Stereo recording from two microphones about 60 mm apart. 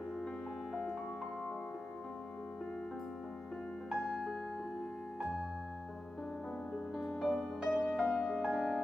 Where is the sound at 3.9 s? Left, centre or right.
Centre.